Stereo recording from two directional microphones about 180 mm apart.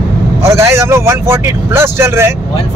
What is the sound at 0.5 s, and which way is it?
Speech, 15° right (ahead or behind).